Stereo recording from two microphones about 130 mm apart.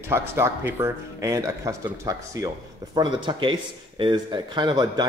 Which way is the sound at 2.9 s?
35° right (ahead or behind).